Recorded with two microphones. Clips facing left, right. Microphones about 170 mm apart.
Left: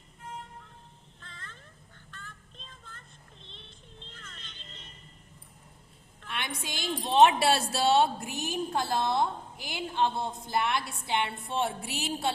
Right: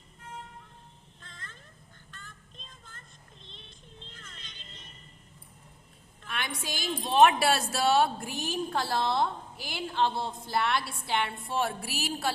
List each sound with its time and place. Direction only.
4.2 s vehicle: 10° right (ahead or behind)
6.2 s a woman's voice: 25° left (ahead or behind)